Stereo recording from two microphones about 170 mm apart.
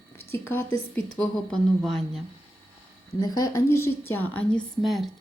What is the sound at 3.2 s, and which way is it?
A woman's voice, 20° left (ahead or behind).